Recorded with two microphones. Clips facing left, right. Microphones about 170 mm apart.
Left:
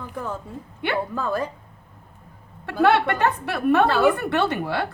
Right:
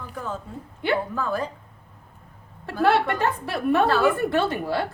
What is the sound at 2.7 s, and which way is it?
A woman's voice, 65° left (ahead or behind).